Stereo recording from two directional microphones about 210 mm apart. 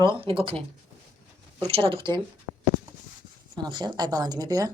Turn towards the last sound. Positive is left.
turn(degrees=-15)  # may be behind; listen again after turning